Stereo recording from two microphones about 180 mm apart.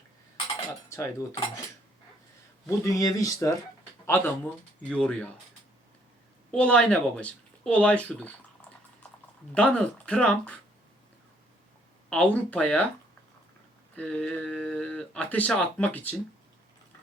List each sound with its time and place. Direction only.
0.9 s speech: 15° left (ahead or behind)
2.6 s speech: 20° left (ahead or behind)
6.5 s speech: 5° left (ahead or behind)
9.6 s speech: 5° left (ahead or behind)
12.1 s speech: 10° left (ahead or behind)
13.9 s speech: 5° left (ahead or behind)